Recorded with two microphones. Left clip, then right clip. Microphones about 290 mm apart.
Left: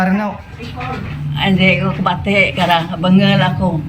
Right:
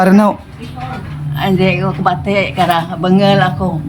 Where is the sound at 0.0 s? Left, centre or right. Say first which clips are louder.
Right 7 dB; right.